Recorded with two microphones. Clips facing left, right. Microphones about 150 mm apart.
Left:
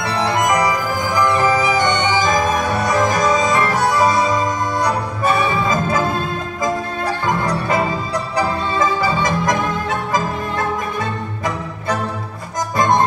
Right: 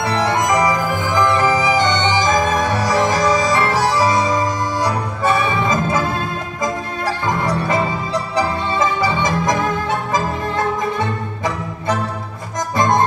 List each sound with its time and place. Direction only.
0.3 s music: 20° right (ahead or behind)
3.5 s organ: 25° right (ahead or behind)
7.4 s music: 25° right (ahead or behind)